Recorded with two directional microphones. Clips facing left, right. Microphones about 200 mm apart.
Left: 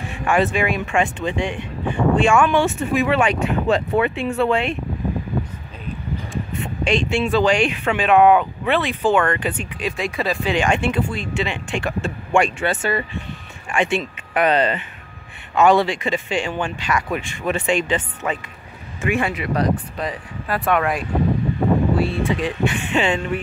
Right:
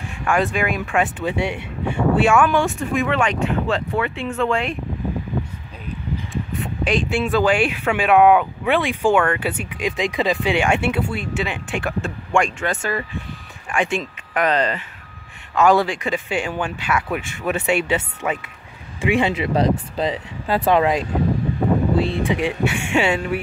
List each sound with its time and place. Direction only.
0.2 s speech: centre (ahead or behind)
4.5 s speech: centre (ahead or behind)
6.6 s speech: 5° right (ahead or behind)
19.3 s speech: 25° right (ahead or behind); by 23.4 s 10° right (ahead or behind)